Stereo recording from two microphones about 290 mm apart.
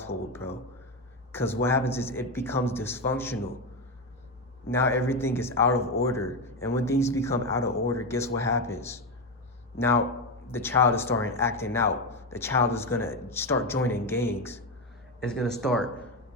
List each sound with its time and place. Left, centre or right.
0.0 s speech: centre
4.7 s a man's voice: centre